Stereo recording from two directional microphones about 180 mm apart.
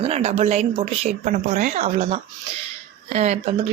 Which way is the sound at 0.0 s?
35° right (ahead or behind).